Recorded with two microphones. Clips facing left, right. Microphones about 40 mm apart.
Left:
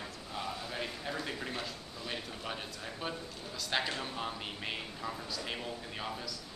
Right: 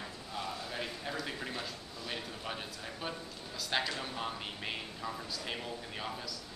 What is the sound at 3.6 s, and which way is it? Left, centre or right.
A man's voice, centre.